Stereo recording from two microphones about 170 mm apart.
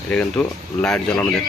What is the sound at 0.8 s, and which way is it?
Speech, 5° left (ahead or behind).